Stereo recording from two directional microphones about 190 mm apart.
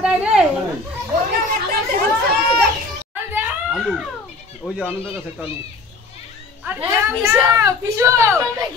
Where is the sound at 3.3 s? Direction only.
10° right (ahead or behind).